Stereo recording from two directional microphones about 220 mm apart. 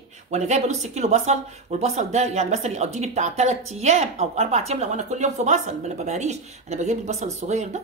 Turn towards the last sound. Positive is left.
turn(degrees=-30)  # may be behind; listen again after turning